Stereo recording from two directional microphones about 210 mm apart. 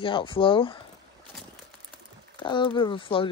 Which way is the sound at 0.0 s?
25° left (ahead or behind).